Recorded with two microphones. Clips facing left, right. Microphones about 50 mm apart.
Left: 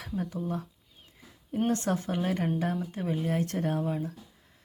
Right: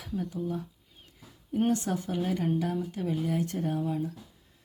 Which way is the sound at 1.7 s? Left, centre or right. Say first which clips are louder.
Even; left.